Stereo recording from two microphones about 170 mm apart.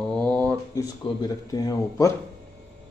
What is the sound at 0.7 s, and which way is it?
Speech, 20° left (ahead or behind).